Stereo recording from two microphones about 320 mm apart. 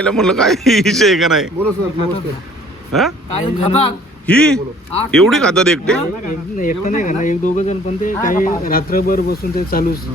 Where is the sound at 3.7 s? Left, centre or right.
Centre.